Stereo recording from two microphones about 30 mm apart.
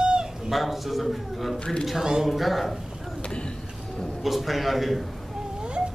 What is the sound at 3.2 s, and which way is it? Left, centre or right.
Vehicle, left.